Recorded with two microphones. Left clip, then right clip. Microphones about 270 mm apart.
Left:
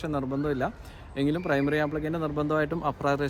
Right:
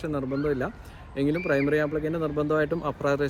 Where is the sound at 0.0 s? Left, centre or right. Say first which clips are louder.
Right 1 dB; centre.